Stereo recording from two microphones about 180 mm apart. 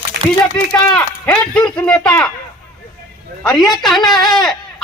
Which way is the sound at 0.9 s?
10° left (ahead or behind).